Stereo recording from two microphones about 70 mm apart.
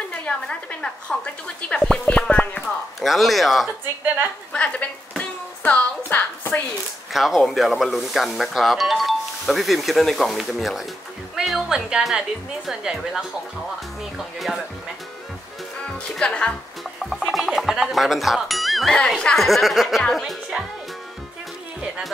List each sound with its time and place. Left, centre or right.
0.1 s a woman's voice: centre
3.0 s speech: centre
4.5 s a sound: centre
6.0 s a woman's voice: left
7.1 s speech: centre
15.8 s speech: centre
17.2 s a woman's voice: centre